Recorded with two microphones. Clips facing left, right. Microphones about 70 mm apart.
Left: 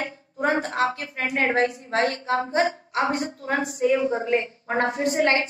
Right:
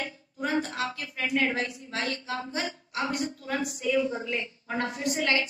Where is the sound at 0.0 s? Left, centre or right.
Left.